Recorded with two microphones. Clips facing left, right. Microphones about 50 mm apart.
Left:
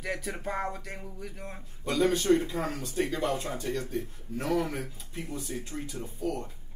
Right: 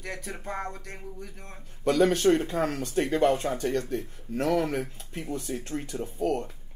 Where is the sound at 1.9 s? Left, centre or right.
Right.